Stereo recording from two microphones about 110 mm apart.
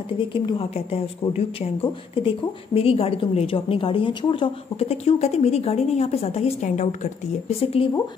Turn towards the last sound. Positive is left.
turn(degrees=65)  # may be behind; listen again after turning